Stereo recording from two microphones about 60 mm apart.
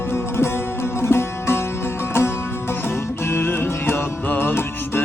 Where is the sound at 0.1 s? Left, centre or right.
Left.